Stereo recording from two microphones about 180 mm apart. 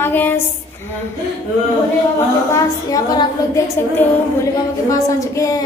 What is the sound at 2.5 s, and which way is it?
A woman's voice, 20° left (ahead or behind).